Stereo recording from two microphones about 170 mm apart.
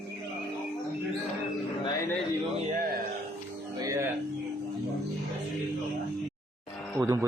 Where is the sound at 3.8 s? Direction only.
20° right (ahead or behind).